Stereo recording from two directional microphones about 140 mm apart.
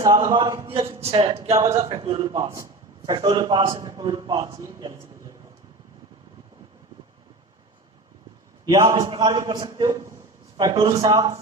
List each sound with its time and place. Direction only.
0.0 s a man's voice: 25° right (ahead or behind)
1.0 s speech: 45° right (ahead or behind)
1.5 s a man's voice: 20° right (ahead or behind)
2.0 s speech: 45° right (ahead or behind)
3.1 s a man's voice: 30° right (ahead or behind)
8.6 s a man's voice: 25° right (ahead or behind)